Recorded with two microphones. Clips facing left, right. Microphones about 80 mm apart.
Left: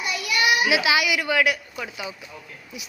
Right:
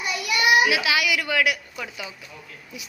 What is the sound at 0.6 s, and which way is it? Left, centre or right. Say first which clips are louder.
A child's voice: left 1 dB; centre.